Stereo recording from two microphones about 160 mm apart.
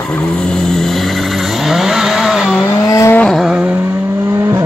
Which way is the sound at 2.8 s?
20° left (ahead or behind).